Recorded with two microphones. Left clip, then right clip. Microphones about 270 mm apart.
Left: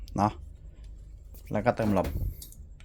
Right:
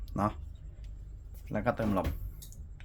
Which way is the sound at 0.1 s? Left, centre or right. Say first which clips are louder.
Left 5 dB; left.